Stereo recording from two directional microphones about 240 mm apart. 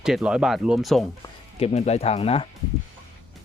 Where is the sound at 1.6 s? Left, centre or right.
Left.